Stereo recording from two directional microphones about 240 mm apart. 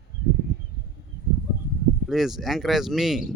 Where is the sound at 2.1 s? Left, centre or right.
Centre.